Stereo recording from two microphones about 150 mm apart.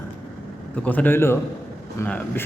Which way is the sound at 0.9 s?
10° left (ahead or behind).